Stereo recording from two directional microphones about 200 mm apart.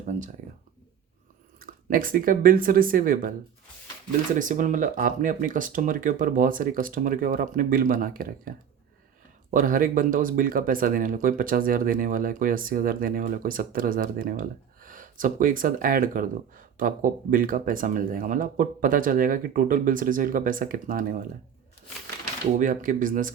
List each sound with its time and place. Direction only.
0.0 s speech: 40° right (ahead or behind)
1.5 s speech: 45° right (ahead or behind)
4.4 s speech: 40° right (ahead or behind)
22.5 s speech: 40° right (ahead or behind)